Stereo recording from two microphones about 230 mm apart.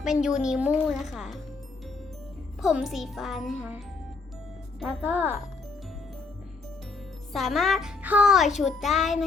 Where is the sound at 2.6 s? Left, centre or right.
Centre.